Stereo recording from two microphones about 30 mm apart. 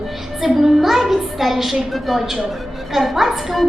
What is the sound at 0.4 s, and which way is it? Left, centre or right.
A woman's voice, centre.